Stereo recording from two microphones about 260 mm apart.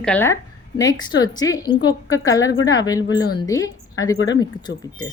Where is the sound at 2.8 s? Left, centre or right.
Centre.